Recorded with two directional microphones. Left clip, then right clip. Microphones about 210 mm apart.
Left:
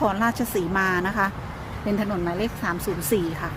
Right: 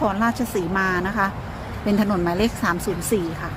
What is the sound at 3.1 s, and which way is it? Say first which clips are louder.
Speech: right 1 dB; 10° left (ahead or behind).